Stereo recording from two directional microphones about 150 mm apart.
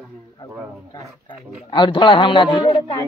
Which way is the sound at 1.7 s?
30° left (ahead or behind).